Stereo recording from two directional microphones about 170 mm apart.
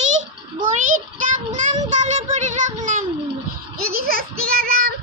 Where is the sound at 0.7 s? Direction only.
45° right (ahead or behind).